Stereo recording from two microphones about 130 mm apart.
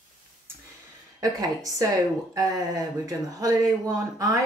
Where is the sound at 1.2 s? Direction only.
25° right (ahead or behind).